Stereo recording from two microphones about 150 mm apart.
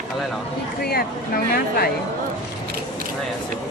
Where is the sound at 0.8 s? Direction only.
90° left.